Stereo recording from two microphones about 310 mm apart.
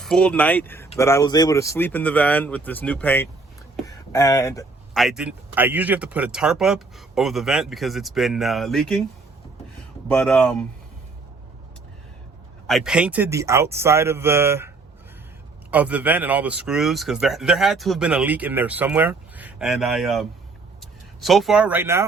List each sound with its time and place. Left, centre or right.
0.0 s speech: centre
5.0 s speech: centre
10.1 s speech: centre
12.6 s a man's voice: centre
15.7 s speech: centre